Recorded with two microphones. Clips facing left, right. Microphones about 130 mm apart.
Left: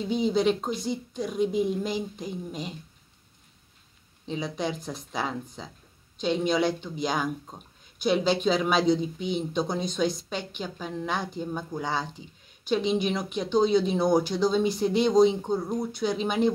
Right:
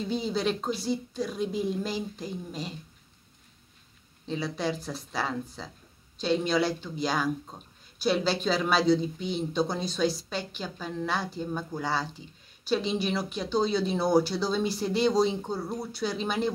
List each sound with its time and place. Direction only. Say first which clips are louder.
0.1 s speech: left 6 dB; 15° left (ahead or behind)
4.3 s speech: even; 15° left (ahead or behind)